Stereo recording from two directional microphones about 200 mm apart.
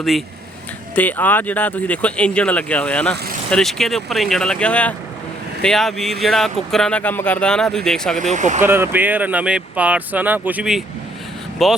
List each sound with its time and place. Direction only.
0.9 s speech: 10° left (ahead or behind)
8.2 s speech: 40° right (ahead or behind)
8.6 s speech: 10° right (ahead or behind)